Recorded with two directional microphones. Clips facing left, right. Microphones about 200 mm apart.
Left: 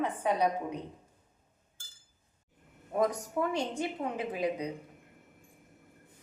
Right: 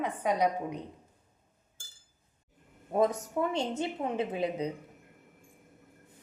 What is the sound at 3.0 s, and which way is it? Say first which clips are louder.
A woman's voice: right 2 dB; 25° right (ahead or behind).